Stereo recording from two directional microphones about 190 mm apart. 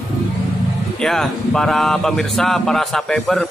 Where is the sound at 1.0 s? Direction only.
5° left (ahead or behind).